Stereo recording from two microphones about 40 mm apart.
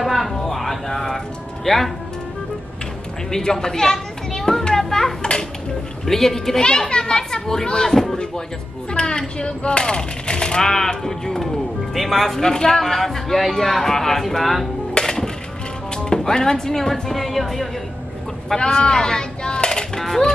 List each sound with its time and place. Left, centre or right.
0.0 s a sound: centre
3.3 s children playing: centre
6.0 s speech: centre
6.6 s speech: left
8.9 s a sound: left
9.4 s speech: left; by 14.7 s centre
15.0 s music: centre
16.0 s speech: centre
18.6 s speech: centre
20.0 s music: centre